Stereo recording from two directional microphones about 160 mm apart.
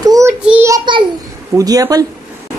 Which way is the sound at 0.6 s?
25° right (ahead or behind).